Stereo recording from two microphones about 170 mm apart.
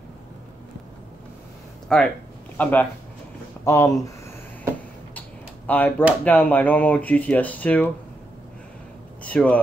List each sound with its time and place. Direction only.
1.9 s a man's voice: 5° left (ahead or behind)
5.7 s speech: 10° left (ahead or behind)
9.2 s speech: 10° left (ahead or behind)